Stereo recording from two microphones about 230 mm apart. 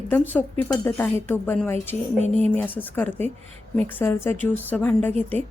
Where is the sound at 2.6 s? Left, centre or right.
Centre.